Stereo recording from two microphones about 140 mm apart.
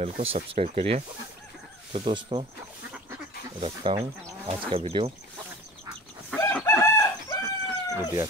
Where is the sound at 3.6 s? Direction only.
35° right (ahead or behind).